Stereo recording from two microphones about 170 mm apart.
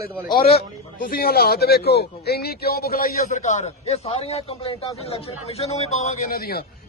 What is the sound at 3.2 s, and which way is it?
A man's voice, 45° left (ahead or behind).